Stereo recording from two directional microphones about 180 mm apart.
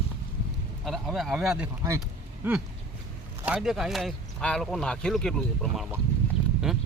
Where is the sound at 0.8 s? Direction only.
Centre (ahead or behind).